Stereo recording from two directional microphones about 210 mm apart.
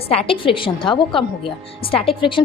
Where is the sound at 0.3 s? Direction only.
25° left (ahead or behind).